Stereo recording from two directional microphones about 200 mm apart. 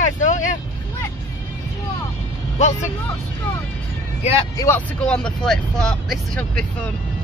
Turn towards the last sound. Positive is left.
turn(degrees=5)  # may be behind; listen again after turning